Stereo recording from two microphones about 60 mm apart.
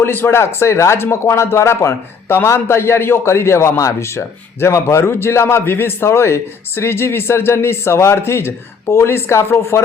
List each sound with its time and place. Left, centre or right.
0.0 s a man's voice: left